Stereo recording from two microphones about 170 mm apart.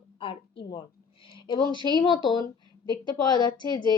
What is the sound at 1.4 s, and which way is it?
Speech, 25° left (ahead or behind).